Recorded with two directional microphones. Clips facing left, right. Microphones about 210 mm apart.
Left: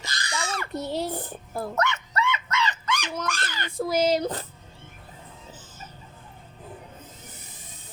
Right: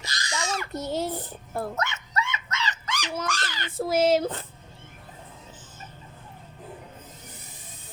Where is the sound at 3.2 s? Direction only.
55° left (ahead or behind).